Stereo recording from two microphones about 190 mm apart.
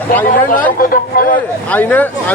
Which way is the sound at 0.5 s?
45° left (ahead or behind).